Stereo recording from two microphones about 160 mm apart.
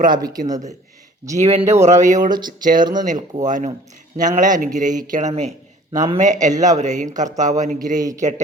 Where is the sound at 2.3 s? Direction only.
25° right (ahead or behind).